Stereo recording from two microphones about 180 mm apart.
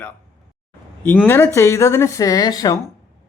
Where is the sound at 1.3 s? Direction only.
10° left (ahead or behind).